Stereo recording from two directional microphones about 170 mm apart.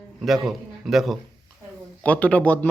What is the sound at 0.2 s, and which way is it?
A man's voice, centre (ahead or behind).